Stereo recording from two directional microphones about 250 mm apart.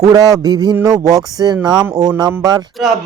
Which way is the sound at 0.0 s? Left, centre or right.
Centre.